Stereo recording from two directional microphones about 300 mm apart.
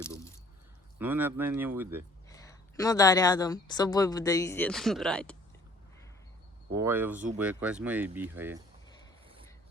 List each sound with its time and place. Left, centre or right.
0.0 s squish: centre
0.9 s speech: centre
2.3 s a woman's voice: centre
6.7 s speech: centre